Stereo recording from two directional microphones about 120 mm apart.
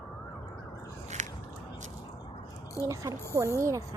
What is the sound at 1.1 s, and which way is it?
Biting, 75° right (ahead or behind).